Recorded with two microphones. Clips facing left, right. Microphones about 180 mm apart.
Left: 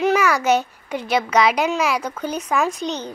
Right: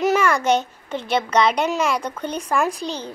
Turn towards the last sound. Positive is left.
turn(degrees=-30)  # may be behind; listen again after turning